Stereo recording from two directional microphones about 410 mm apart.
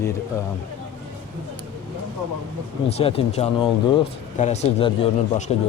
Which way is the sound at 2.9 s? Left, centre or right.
Centre.